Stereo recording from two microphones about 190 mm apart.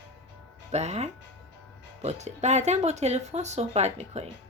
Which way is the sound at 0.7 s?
35° right (ahead or behind).